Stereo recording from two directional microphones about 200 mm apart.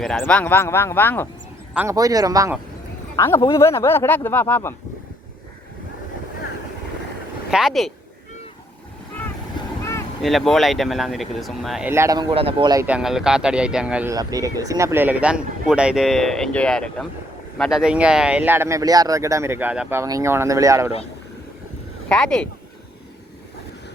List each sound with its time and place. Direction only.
0.0 s speech: 5° left (ahead or behind)
1.7 s speech: 10° right (ahead or behind)
3.2 s speech: 15° left (ahead or behind)
7.5 s speech: centre (ahead or behind)
10.2 s speech: centre (ahead or behind)
11.9 s speech: 15° right (ahead or behind)
12.8 s speech: 5° right (ahead or behind)
22.1 s speech: 5° left (ahead or behind)